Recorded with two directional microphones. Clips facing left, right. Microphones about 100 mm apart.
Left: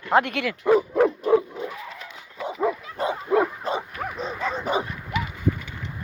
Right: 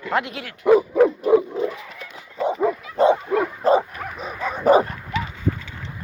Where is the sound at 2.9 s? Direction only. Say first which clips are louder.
Right 10 dB; 30° right (ahead or behind).